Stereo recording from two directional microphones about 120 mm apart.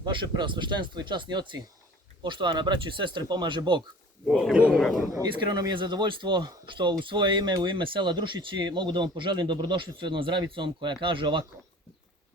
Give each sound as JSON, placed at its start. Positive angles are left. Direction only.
{"t": 0.0, "sound": "speech", "side_deg": -40}
{"t": 4.3, "sound": "speech", "side_deg": 0}
{"t": 5.1, "sound": "speech", "side_deg": -35}